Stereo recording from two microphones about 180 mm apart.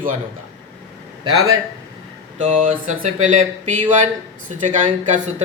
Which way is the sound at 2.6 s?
40° right (ahead or behind).